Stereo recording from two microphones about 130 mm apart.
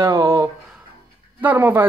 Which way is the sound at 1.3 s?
15° right (ahead or behind).